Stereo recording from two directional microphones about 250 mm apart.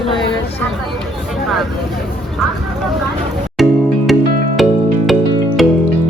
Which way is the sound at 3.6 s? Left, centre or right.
Centre.